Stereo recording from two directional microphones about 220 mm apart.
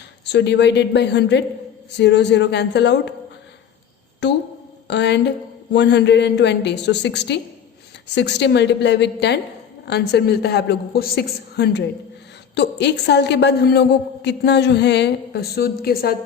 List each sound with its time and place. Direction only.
0.3 s a woman's voice: 50° left (ahead or behind)
4.2 s a woman's voice: 50° left (ahead or behind)